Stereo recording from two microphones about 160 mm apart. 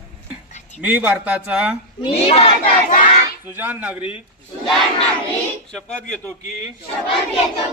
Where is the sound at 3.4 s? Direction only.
10° right (ahead or behind).